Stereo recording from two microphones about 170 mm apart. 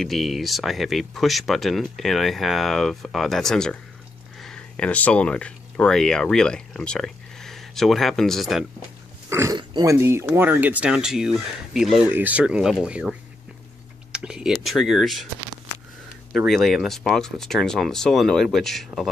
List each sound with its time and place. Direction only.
0.0 s speech: centre (ahead or behind)
9.3 s speech: 15° right (ahead or behind)
14.1 s speech: 5° right (ahead or behind)
16.3 s speech: centre (ahead or behind)